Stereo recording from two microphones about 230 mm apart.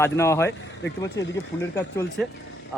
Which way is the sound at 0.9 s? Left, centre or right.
Left.